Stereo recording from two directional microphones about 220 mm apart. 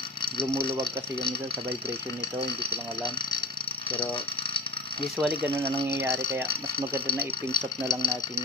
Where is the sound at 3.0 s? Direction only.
20° left (ahead or behind).